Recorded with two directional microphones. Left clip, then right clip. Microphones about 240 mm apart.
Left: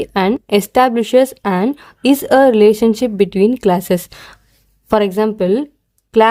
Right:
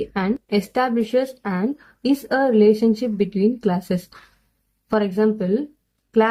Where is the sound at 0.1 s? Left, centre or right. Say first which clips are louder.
Left 9 dB; left.